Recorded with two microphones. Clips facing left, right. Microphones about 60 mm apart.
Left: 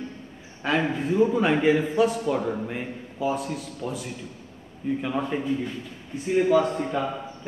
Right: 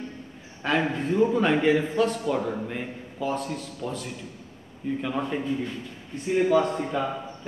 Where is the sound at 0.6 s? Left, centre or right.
Centre.